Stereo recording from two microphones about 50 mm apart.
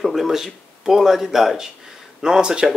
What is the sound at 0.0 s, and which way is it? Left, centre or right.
Speech, centre.